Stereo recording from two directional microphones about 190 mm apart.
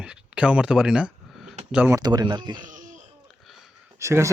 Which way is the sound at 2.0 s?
20° right (ahead or behind).